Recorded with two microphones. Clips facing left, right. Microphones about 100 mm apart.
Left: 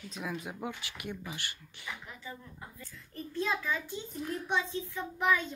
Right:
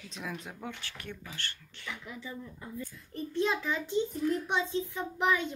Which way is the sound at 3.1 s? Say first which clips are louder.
Right 3 dB; 25° right (ahead or behind).